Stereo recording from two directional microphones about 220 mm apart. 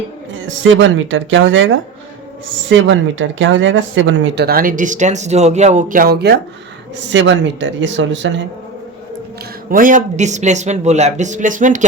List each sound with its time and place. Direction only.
0.7 s speech: 60° right (ahead or behind)
2.6 s speech: 60° right (ahead or behind)
9.6 s speech: 40° right (ahead or behind)